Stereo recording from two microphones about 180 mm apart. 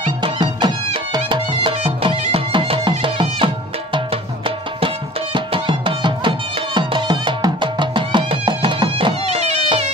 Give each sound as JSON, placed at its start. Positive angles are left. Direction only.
{"t": 0.0, "sound": "music", "side_deg": -25}